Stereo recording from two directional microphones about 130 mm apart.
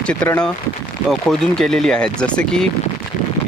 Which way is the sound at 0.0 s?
10° left (ahead or behind).